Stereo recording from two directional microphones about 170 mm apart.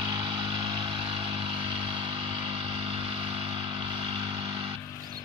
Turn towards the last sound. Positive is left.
turn(degrees=-30)  # may be behind; listen again after turning